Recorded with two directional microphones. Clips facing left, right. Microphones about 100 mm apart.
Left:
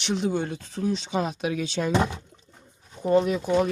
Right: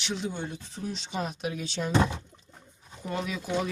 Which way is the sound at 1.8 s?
65° left (ahead or behind).